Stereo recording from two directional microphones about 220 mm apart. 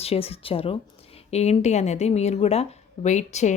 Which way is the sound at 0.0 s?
25° left (ahead or behind).